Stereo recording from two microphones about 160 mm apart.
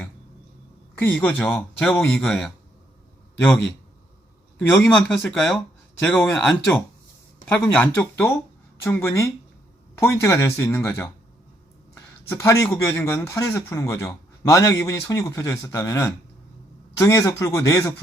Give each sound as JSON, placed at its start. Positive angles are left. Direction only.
{"t": 0.9, "sound": "speech", "side_deg": 10}
{"t": 4.7, "sound": "speech", "side_deg": 5}
{"t": 12.3, "sound": "a man's voice", "side_deg": 15}